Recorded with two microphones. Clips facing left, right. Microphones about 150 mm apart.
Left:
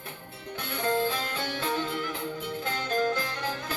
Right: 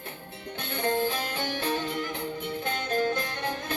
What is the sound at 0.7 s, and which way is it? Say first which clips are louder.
Music: even; 20° right (ahead or behind).